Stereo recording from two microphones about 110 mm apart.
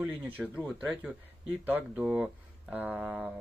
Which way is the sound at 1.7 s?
15° right (ahead or behind).